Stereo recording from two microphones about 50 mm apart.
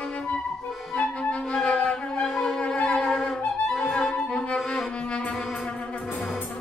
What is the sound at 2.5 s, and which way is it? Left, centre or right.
Music, left.